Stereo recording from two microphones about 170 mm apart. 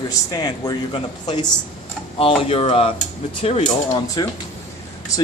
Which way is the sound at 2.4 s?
35° left (ahead or behind).